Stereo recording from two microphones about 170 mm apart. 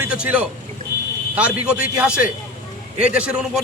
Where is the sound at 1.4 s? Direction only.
5° right (ahead or behind).